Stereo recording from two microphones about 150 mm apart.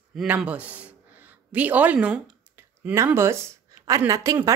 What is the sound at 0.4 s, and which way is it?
A woman's voice, 10° right (ahead or behind).